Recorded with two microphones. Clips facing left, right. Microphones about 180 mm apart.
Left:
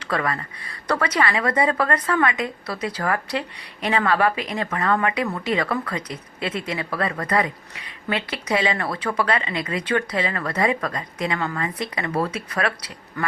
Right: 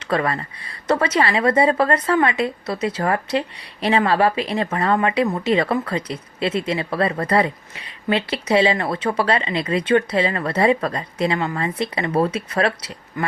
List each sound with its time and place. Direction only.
0.0 s a woman's voice: 25° right (ahead or behind)
13.2 s speech: 15° right (ahead or behind)